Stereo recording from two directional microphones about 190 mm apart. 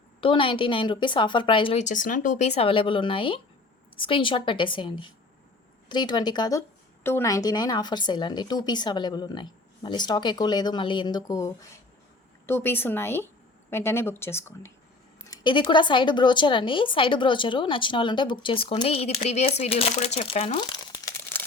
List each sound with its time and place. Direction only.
0.2 s a woman's voice: 25° left (ahead or behind)
1.8 s a woman's voice: 40° left (ahead or behind); by 14.7 s 15° left (ahead or behind)
15.3 s a woman's voice: 25° left (ahead or behind)